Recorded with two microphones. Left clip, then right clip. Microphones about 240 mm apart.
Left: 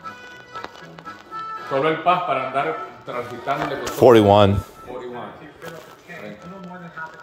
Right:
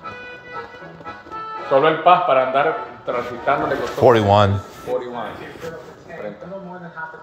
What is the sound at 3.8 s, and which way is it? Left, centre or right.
Speech, left.